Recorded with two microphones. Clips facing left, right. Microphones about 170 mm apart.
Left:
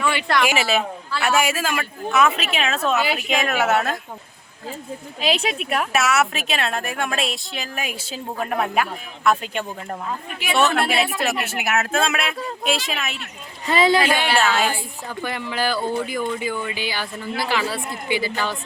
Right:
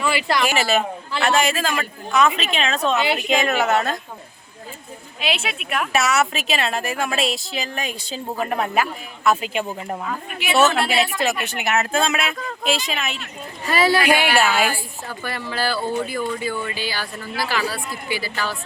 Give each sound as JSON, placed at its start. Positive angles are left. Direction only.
{"t": 0.0, "sound": "a woman's voice", "side_deg": -5}
{"t": 5.2, "sound": "speech", "side_deg": 40}
{"t": 5.9, "sound": "speech", "side_deg": 0}
{"t": 13.7, "sound": "speech", "side_deg": 20}
{"t": 14.1, "sound": "a woman's voice", "side_deg": -10}
{"t": 14.7, "sound": "a woman's voice", "side_deg": 20}